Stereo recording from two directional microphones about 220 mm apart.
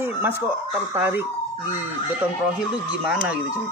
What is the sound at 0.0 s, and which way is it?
Speech, 10° right (ahead or behind).